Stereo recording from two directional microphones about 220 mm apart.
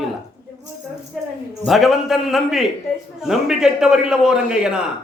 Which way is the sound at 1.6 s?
Centre (ahead or behind).